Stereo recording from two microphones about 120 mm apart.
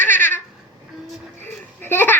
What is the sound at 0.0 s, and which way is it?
Babbling, 15° left (ahead or behind).